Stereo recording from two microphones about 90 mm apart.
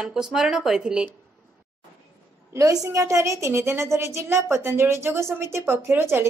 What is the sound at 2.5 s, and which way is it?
A woman's voice, 35° right (ahead or behind).